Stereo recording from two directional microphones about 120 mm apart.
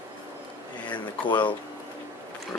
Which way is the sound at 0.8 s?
40° left (ahead or behind).